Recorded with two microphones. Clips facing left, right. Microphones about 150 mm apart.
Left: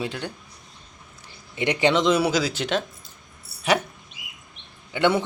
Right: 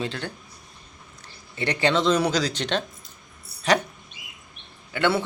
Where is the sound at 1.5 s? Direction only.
15° left (ahead or behind).